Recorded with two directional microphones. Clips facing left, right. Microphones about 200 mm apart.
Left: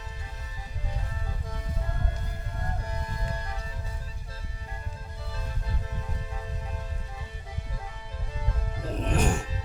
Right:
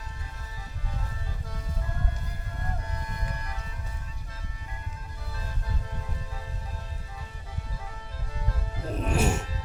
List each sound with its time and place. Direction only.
3.2 s music: 30° left (ahead or behind)
8.9 s music: 5° right (ahead or behind)